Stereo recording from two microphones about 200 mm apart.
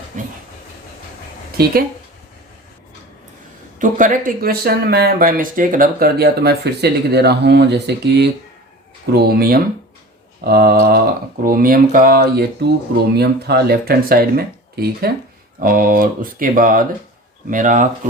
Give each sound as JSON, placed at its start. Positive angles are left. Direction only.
{"t": 0.1, "sound": "vehicle", "side_deg": -40}
{"t": 3.8, "sound": "speech", "side_deg": -40}